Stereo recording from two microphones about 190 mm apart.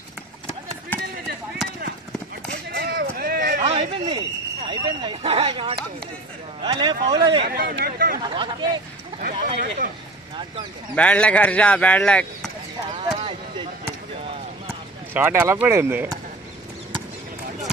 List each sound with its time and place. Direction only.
2.7 s a sound: 55° right (ahead or behind)
3.6 s a sound: 30° right (ahead or behind)
4.6 s speech: 25° right (ahead or behind)
7.4 s speech: 55° right (ahead or behind)
8.2 s speech: 25° right (ahead or behind)
9.4 s speech: 45° right (ahead or behind)
11.0 s speech: 5° left (ahead or behind)
12.9 s a sound: 25° right (ahead or behind)
15.1 s speech: 15° right (ahead or behind)